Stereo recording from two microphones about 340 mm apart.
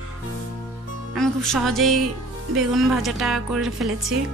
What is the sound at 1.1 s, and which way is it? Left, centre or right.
Speech, centre.